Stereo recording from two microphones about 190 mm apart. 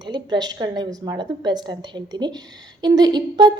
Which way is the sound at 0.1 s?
20° right (ahead or behind).